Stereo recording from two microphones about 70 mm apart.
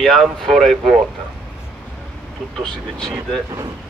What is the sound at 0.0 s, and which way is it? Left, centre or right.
Speech, centre.